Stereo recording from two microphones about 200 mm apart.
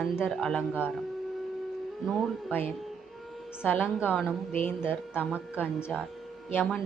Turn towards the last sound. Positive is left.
turn(degrees=5)  # may be behind; listen again after turning